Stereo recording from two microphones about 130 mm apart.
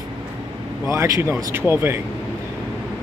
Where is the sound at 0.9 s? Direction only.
20° right (ahead or behind).